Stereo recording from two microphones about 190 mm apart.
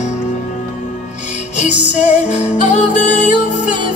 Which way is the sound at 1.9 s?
35° left (ahead or behind).